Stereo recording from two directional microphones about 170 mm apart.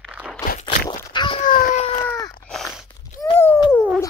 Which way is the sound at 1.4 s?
50° left (ahead or behind).